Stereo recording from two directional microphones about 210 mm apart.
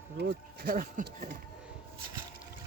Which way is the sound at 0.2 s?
50° right (ahead or behind).